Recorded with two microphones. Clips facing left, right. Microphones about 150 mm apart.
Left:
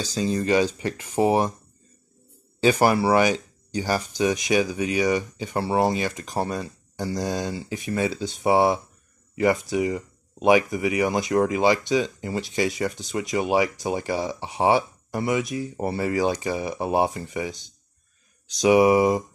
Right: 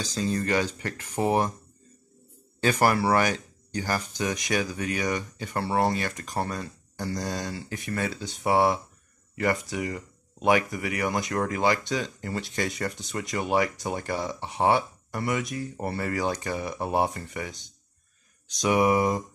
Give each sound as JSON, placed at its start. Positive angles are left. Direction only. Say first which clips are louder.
{"t": 0.1, "sound": "speech", "louder": "left 5 dB", "side_deg": 15}
{"t": 2.6, "sound": "speech", "louder": "left 4 dB", "side_deg": 20}
{"t": 18.6, "sound": "speech", "louder": "left 6 dB", "side_deg": 15}